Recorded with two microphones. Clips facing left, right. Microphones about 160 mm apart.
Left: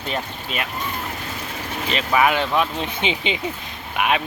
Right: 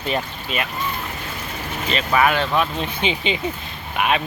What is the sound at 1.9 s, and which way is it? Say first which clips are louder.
Speech: even; 15° left (ahead or behind).